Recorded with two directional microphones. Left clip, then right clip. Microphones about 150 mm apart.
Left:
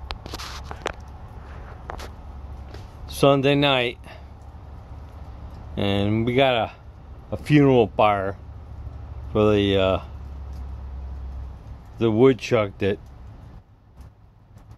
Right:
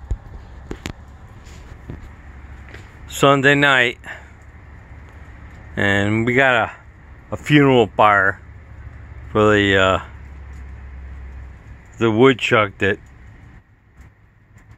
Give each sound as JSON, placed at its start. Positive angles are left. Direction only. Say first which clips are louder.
{"t": 3.2, "sound": "speech", "louder": "right 5 dB", "side_deg": -20}
{"t": 5.8, "sound": "speech", "louder": "right 6 dB", "side_deg": -20}
{"t": 12.0, "sound": "speech", "louder": "right 4 dB", "side_deg": -10}